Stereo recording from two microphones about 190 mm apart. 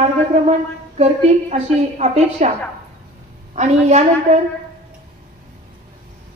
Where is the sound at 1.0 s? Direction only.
35° right (ahead or behind).